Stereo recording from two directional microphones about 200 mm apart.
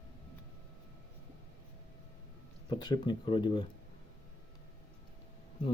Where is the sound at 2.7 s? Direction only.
20° left (ahead or behind).